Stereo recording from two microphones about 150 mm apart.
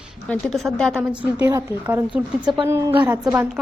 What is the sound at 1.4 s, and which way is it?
A woman's voice, 20° right (ahead or behind).